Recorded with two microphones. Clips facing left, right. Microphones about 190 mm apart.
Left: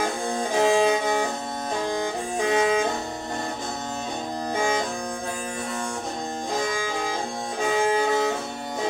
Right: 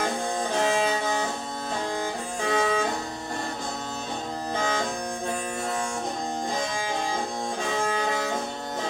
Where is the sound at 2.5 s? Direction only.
20° left (ahead or behind).